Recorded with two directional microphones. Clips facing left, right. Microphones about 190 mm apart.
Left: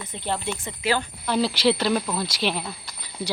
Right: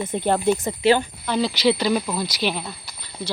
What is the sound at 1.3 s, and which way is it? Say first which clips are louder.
Speech: right 1 dB; 5° left (ahead or behind).